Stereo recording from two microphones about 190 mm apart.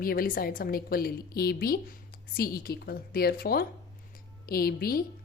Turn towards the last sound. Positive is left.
turn(degrees=50)  # may be behind; listen again after turning